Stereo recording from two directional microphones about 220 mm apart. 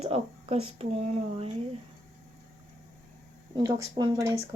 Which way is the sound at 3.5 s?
15° right (ahead or behind).